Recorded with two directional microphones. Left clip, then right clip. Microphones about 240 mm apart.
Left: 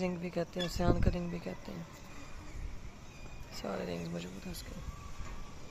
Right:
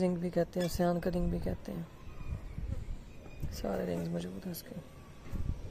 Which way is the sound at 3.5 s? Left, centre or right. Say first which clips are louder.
Right 3 dB; right.